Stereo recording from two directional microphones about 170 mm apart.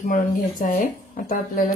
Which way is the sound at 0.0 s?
50° left (ahead or behind).